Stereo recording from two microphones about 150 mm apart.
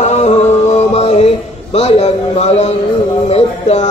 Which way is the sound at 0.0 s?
50° left (ahead or behind).